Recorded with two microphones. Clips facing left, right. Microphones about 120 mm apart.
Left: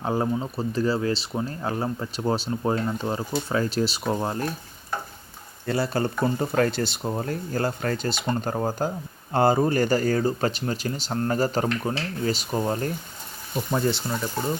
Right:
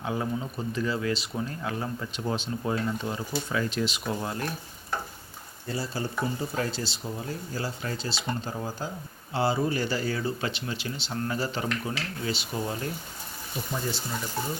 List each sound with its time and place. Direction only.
0.0 s speech: 40° left (ahead or behind)
5.6 s speech: 65° left (ahead or behind); by 12.9 s 45° left (ahead or behind)
13.7 s speech: 55° left (ahead or behind)